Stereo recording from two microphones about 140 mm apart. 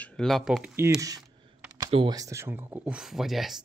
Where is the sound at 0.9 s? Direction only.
25° right (ahead or behind); by 3.5 s centre (ahead or behind).